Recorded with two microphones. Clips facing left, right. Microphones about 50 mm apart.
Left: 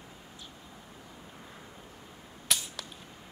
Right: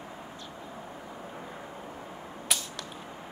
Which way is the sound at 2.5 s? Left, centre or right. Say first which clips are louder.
Even; centre.